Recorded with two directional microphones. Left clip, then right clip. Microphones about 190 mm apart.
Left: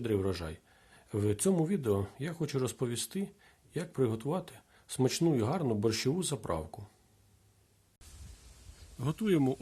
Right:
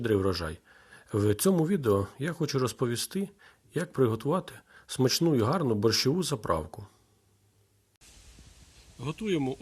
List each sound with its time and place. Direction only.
0.0 s speech: 10° right (ahead or behind)
9.0 s speech: 55° left (ahead or behind)